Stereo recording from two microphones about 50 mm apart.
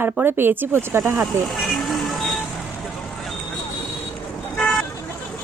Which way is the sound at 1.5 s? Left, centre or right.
Centre.